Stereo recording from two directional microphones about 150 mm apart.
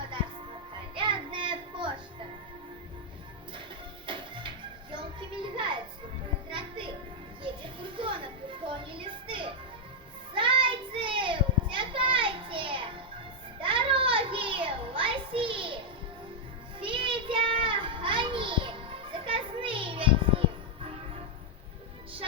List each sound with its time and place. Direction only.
0.9 s child singing: 35° right (ahead or behind)
4.0 s music: 35° right (ahead or behind)
10.3 s child singing: 35° right (ahead or behind)
16.8 s children playing: 35° right (ahead or behind)